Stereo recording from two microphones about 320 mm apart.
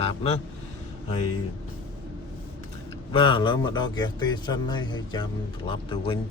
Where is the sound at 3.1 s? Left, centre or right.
Centre.